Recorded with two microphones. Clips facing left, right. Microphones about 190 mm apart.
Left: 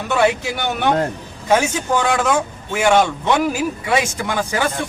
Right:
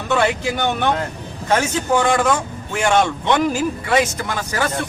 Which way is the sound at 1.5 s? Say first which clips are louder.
Left 1 dB; 10° left (ahead or behind).